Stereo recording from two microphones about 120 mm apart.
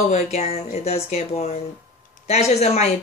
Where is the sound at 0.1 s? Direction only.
60° left (ahead or behind).